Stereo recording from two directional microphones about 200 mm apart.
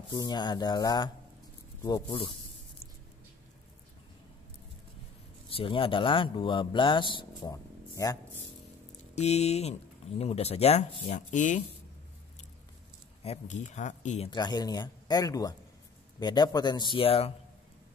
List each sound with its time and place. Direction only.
0.1 s a man's voice: 20° left (ahead or behind)
2.0 s speech: 25° left (ahead or behind)
5.5 s speech: 25° left (ahead or behind)
9.1 s speech: 35° left (ahead or behind)
13.2 s speech: 35° left (ahead or behind)
14.3 s speech: 20° left (ahead or behind)